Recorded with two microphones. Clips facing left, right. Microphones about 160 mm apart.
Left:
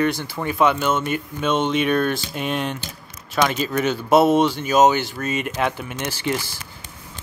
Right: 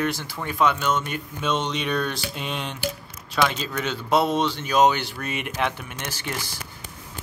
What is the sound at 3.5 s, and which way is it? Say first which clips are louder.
Speech: left 6 dB; 10° left (ahead or behind).